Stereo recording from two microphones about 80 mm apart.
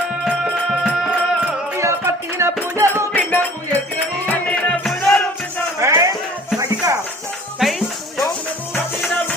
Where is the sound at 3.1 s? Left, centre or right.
Left.